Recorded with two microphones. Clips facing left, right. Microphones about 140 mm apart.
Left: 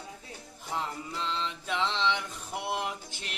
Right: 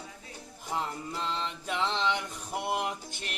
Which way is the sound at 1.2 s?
45° right (ahead or behind).